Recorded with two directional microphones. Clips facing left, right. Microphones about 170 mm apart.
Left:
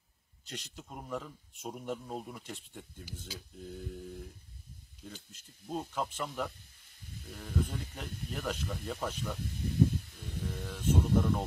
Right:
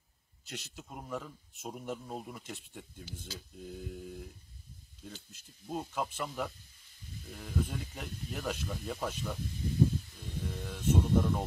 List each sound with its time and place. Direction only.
0.5 s speech: 5° right (ahead or behind)
5.3 s speech: 5° right (ahead or behind)
9.4 s snake: 65° left (ahead or behind)
10.1 s speech: centre (ahead or behind)